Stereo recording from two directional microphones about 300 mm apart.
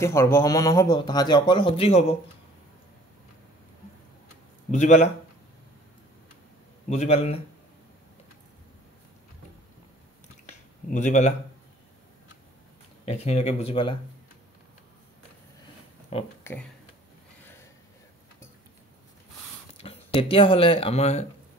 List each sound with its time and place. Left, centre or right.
0.0 s speech: centre
4.6 s speech: left
6.9 s speech: left
10.9 s speech: left
13.0 s speech: left
16.1 s speech: centre
19.8 s speech: centre